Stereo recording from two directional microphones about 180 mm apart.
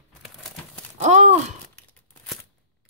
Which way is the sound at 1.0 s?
40° right (ahead or behind).